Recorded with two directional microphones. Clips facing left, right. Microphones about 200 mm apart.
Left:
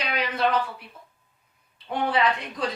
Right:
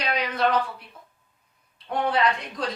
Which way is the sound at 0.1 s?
5° left (ahead or behind).